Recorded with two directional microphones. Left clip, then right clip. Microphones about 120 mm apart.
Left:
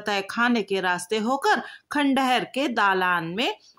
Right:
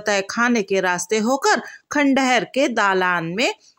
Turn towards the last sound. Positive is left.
turn(degrees=-30)  # may be behind; listen again after turning